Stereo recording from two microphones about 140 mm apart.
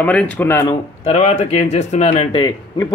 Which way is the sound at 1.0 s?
50° left (ahead or behind).